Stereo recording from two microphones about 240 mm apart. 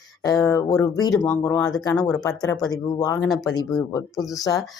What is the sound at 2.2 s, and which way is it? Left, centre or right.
Speech, centre.